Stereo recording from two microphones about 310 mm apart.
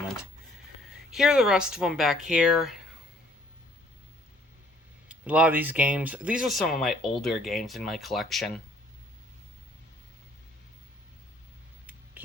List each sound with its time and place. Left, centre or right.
1.1 s speech: centre
5.0 s speech: centre